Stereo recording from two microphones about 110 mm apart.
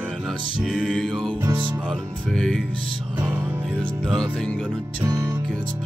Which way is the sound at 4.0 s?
5° left (ahead or behind).